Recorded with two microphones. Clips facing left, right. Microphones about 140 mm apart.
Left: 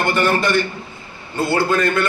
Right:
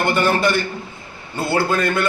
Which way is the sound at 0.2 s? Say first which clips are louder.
Left 2 dB; 5° right (ahead or behind).